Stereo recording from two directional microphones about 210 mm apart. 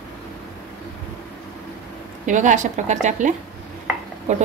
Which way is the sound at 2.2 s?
35° right (ahead or behind).